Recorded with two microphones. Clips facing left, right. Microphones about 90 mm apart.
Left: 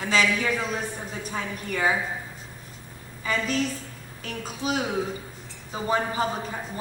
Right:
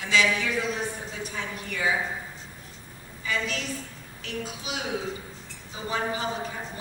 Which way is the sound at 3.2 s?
40° left (ahead or behind).